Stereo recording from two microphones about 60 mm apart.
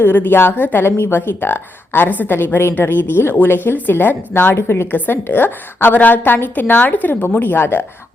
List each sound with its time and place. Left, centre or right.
0.0 s speech: left